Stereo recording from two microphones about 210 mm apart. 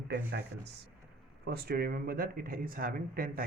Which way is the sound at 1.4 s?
50° right (ahead or behind).